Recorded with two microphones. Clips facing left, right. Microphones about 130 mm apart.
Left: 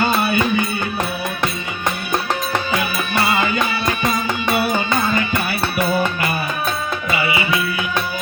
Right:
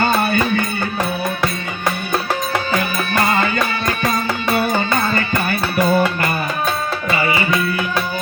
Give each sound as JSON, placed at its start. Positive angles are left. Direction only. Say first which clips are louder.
{"t": 0.3, "sound": "music", "louder": "even", "side_deg": 10}
{"t": 2.7, "sound": "music", "louder": "right 2 dB", "side_deg": 10}